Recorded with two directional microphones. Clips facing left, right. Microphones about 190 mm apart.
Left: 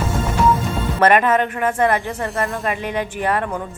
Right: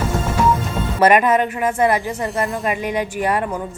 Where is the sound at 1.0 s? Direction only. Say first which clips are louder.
Right 1 dB; 10° right (ahead or behind).